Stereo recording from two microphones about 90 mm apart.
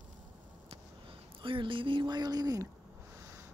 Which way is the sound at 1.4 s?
70° right (ahead or behind).